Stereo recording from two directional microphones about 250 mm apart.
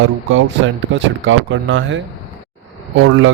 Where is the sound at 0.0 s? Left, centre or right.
Right.